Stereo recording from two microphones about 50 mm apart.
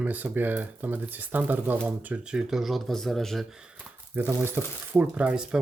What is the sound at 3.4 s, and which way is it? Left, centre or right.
Speech, centre.